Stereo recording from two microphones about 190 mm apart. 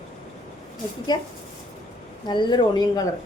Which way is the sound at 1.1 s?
20° left (ahead or behind).